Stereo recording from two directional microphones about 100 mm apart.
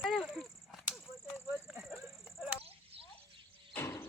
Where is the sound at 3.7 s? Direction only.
25° left (ahead or behind).